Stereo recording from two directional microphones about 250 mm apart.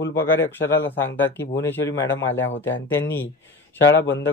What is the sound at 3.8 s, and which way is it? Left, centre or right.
Speech, left.